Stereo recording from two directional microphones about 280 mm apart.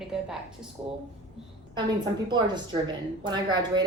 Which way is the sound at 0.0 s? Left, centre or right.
Centre.